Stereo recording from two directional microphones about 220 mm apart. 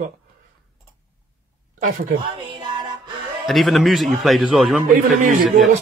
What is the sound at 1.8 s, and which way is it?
Speech, 35° right (ahead or behind).